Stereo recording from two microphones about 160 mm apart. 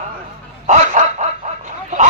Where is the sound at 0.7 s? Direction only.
45° right (ahead or behind).